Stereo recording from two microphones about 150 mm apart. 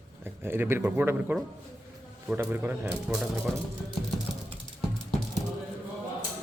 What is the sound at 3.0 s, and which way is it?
Speech, 5° right (ahead or behind).